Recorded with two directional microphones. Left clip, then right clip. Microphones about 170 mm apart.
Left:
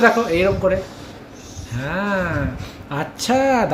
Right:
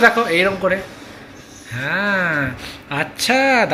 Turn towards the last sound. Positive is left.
turn(degrees=10)  # may be behind; listen again after turning